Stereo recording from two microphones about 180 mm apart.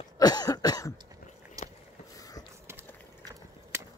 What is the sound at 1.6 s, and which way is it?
Biting, 20° right (ahead or behind).